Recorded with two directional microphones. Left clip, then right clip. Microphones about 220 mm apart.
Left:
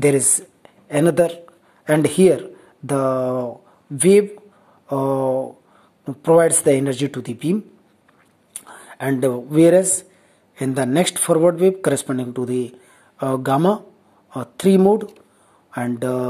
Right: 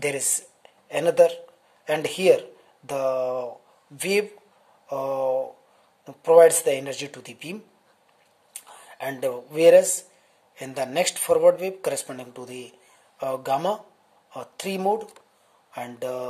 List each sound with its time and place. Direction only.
0.0 s speech: 15° left (ahead or behind)
8.5 s speech: 15° left (ahead or behind)